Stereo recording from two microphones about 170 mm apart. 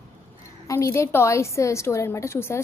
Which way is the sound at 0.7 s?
15° left (ahead or behind).